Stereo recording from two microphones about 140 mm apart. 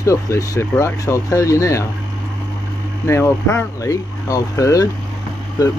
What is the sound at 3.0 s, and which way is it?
Speech, 20° left (ahead or behind).